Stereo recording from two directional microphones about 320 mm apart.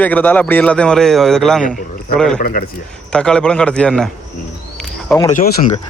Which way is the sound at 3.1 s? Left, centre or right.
Centre.